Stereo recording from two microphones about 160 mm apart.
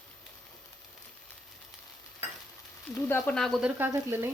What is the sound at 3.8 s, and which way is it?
Speech, 15° right (ahead or behind).